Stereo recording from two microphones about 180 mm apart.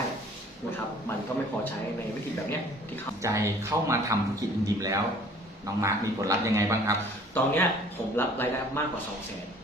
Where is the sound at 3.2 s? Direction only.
15° right (ahead or behind).